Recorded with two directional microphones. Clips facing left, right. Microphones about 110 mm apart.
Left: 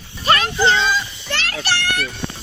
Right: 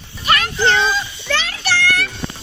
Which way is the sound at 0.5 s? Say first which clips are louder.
Right 2 dB; centre (ahead or behind).